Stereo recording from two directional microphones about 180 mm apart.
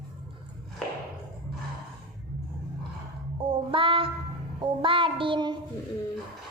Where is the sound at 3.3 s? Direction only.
30° right (ahead or behind).